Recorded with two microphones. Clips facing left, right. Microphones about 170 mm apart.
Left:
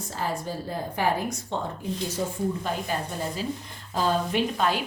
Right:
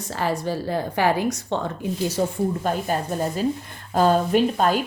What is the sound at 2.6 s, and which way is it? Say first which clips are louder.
A woman's voice: right 6 dB; 50° right (ahead or behind).